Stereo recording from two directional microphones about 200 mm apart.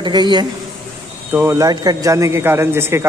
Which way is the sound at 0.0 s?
20° right (ahead or behind).